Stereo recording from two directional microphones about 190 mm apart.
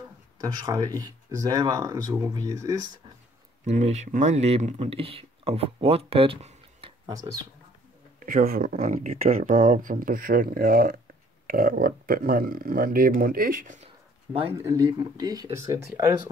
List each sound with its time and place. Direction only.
0.4 s speech: 20° right (ahead or behind)
3.6 s speech: 35° right (ahead or behind)
8.2 s speech: 45° right (ahead or behind)
14.6 s speech: 20° right (ahead or behind)